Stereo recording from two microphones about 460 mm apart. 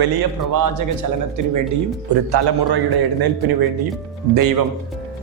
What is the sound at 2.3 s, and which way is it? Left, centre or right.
Speech, right.